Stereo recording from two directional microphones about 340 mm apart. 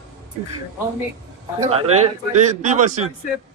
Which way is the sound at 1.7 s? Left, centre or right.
Centre.